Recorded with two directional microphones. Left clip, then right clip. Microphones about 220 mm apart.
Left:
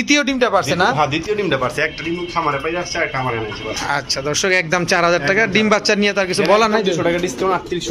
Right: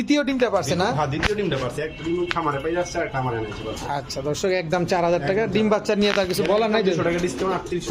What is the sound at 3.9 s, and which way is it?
A man's voice, 5° right (ahead or behind).